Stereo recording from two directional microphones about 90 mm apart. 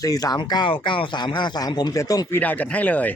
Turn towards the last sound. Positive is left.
turn(degrees=15)  # may be behind; listen again after turning